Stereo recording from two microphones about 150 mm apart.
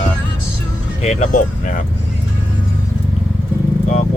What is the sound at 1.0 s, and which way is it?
Speech, 50° left (ahead or behind).